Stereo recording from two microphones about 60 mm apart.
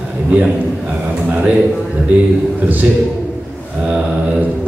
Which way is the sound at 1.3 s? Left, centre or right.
Right.